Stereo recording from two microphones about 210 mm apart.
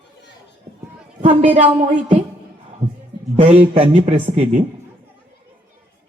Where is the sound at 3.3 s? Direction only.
30° right (ahead or behind).